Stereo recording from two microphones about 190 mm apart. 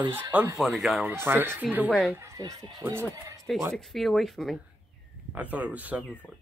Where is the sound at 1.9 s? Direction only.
Centre (ahead or behind).